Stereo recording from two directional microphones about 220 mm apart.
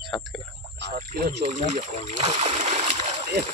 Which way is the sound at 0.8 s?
40° right (ahead or behind).